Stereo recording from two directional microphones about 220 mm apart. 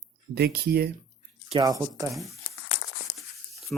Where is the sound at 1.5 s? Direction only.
20° right (ahead or behind).